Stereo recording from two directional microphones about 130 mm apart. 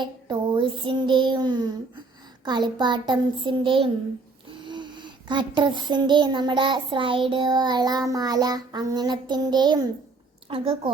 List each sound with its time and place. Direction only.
0.0 s speech: 35° right (ahead or behind)
10.5 s a woman's voice: 45° right (ahead or behind)